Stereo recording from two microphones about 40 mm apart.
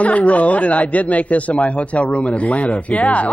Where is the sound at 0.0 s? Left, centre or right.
Left.